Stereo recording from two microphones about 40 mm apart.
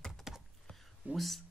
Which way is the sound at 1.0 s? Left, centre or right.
Right.